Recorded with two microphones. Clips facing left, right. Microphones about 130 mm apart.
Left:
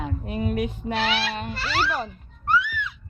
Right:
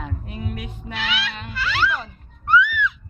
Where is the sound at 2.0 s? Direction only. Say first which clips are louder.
Left 3 dB; 40° left (ahead or behind).